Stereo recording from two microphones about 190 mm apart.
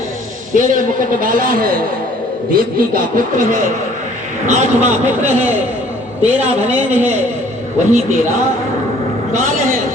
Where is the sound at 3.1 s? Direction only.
45° right (ahead or behind).